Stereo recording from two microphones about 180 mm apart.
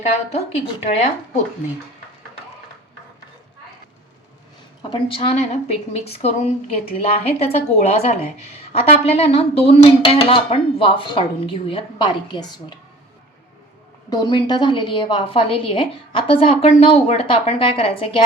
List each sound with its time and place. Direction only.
0.0 s speech: 35° left (ahead or behind)
4.8 s speech: 30° left (ahead or behind)
14.1 s a woman's voice: 25° left (ahead or behind)